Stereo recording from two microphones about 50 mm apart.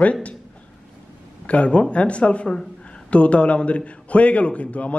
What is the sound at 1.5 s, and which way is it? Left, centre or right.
A man's voice, left.